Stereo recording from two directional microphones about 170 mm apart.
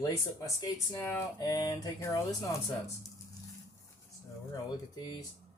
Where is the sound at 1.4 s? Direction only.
25° left (ahead or behind).